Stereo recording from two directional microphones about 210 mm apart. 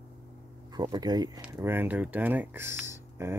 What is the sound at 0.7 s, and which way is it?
Speech, 20° right (ahead or behind).